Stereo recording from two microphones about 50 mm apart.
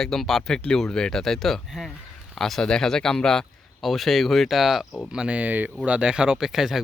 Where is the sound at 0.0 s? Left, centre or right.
Centre.